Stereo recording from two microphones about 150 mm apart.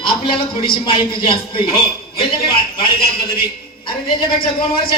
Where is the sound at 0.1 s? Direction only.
35° left (ahead or behind).